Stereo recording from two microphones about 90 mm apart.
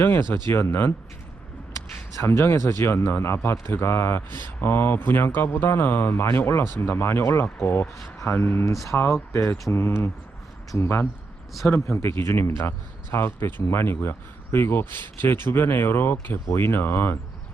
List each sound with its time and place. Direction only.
0.0 s a man's voice: 25° left (ahead or behind)
2.2 s a man's voice: 25° left (ahead or behind)
8.7 s speech: centre (ahead or behind)
9.3 s a man's voice: 30° left (ahead or behind)